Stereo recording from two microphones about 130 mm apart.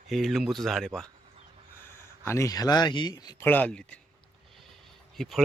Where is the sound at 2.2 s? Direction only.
20° left (ahead or behind).